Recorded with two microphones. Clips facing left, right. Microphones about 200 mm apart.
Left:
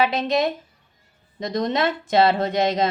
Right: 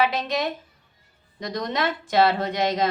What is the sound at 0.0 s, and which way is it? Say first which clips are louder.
A woman's voice: left 3 dB; 25° left (ahead or behind).